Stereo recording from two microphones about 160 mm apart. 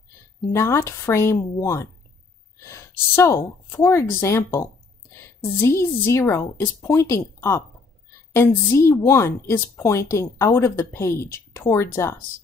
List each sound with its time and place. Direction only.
0.5 s a woman's voice: 15° left (ahead or behind)